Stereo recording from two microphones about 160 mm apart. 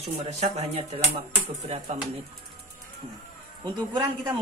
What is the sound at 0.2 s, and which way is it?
A man's voice, 45° right (ahead or behind).